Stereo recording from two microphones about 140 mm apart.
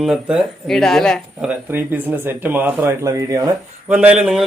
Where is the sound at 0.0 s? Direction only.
5° right (ahead or behind).